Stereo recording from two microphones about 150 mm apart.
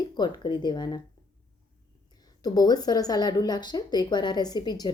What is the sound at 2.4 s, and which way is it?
A woman's voice, 25° left (ahead or behind).